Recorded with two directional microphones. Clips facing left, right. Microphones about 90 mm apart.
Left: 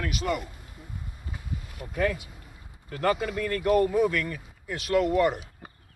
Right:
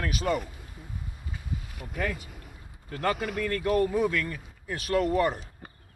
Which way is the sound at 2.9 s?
35° right (ahead or behind).